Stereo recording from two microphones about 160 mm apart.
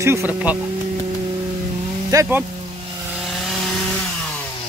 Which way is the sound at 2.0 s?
15° right (ahead or behind).